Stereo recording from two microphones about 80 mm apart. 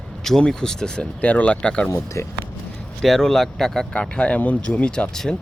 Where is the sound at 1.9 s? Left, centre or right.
Left.